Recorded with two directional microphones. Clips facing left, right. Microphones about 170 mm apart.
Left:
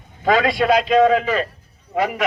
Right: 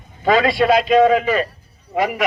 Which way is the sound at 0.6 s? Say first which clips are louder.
Right 2 dB; 5° right (ahead or behind).